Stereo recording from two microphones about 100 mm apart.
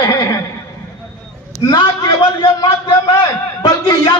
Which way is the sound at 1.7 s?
45° left (ahead or behind).